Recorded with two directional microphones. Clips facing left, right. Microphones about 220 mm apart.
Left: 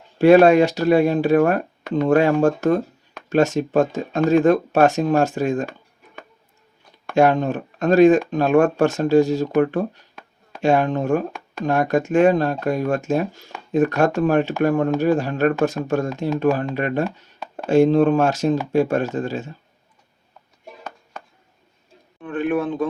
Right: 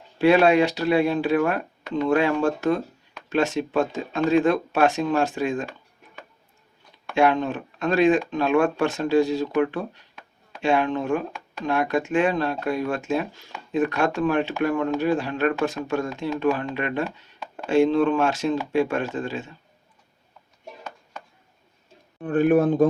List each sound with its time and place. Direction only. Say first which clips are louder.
0.2 s speech: left 5 dB; 45° left (ahead or behind)
7.1 s speech: left 4 dB; 45° left (ahead or behind)
22.2 s speech: right 4 dB; 40° right (ahead or behind)